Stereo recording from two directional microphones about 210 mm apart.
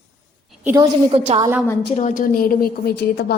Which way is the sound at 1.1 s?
30° right (ahead or behind).